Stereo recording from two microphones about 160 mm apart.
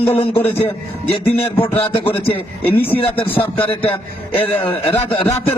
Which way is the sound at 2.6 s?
10° left (ahead or behind).